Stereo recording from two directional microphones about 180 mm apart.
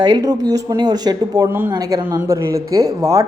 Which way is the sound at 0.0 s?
20° right (ahead or behind).